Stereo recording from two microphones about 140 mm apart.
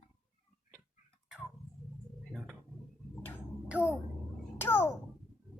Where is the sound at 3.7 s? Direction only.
10° right (ahead or behind).